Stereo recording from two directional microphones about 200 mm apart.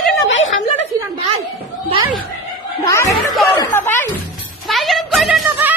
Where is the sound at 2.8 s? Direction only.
15° left (ahead or behind).